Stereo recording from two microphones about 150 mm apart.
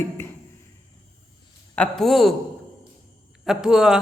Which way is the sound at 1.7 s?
5° left (ahead or behind).